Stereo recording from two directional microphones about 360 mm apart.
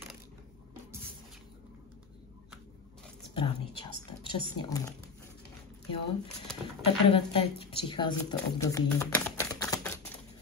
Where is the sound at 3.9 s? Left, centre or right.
Centre.